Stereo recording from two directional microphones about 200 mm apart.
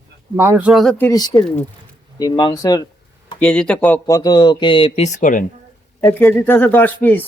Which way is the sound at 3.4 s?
5° left (ahead or behind).